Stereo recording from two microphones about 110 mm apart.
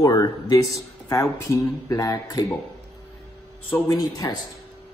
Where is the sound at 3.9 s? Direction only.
35° left (ahead or behind).